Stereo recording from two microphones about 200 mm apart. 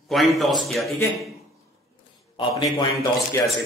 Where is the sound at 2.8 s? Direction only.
15° left (ahead or behind).